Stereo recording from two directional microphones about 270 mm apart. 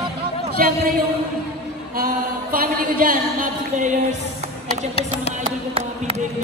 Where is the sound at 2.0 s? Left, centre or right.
Right.